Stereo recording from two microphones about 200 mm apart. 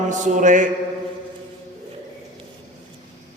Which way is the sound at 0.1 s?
40° right (ahead or behind).